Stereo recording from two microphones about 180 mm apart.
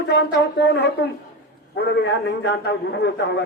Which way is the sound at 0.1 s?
65° left (ahead or behind).